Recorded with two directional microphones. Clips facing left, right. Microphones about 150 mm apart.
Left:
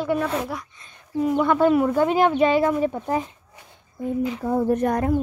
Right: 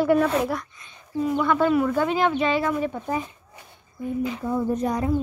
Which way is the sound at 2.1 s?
50° left (ahead or behind).